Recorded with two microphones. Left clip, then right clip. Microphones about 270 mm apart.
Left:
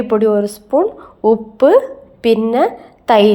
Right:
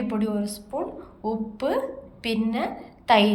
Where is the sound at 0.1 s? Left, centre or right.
Left.